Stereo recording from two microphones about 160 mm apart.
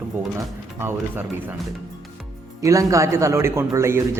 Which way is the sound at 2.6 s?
20° right (ahead or behind).